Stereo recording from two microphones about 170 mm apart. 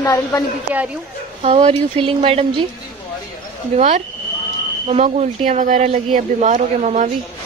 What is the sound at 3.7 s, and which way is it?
Speech, 40° right (ahead or behind).